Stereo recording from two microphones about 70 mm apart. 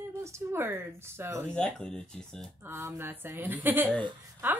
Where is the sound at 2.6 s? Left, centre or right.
Right.